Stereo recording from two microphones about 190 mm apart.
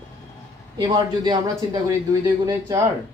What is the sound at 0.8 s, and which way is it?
Speech, 20° right (ahead or behind).